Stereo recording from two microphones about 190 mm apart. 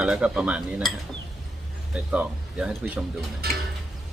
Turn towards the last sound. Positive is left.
turn(degrees=-55)  # may be behind; listen again after turning